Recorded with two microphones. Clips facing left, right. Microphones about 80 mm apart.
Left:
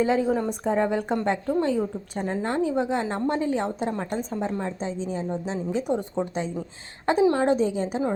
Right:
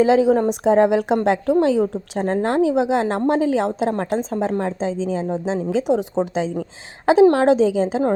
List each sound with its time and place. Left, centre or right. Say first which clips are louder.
0.0 s a woman's voice: right 8 dB; right